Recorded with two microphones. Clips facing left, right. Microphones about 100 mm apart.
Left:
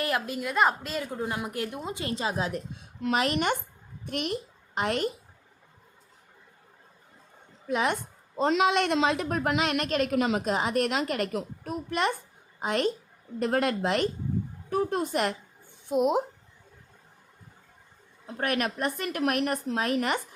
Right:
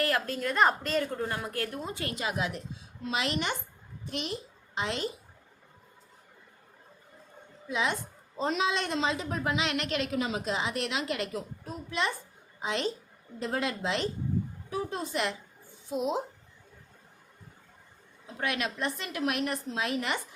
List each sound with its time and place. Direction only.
0.0 s a woman's voice: 15° left (ahead or behind)
2.1 s speech: 30° left (ahead or behind)
2.5 s a woman's voice: 45° left (ahead or behind)
7.7 s a woman's voice: 55° left (ahead or behind)
8.4 s a woman's voice: 80° left; by 16.2 s 60° left (ahead or behind)
18.3 s a woman's voice: 50° left (ahead or behind)